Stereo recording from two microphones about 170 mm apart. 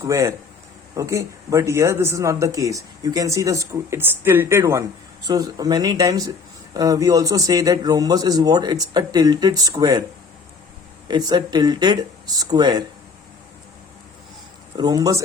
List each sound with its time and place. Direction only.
0.0 s speech: 15° right (ahead or behind)
11.1 s speech: 25° right (ahead or behind)
14.8 s speech: 25° right (ahead or behind)